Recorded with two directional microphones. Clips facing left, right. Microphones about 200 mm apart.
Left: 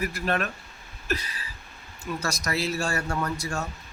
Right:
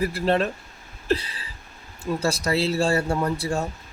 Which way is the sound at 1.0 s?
30° right (ahead or behind).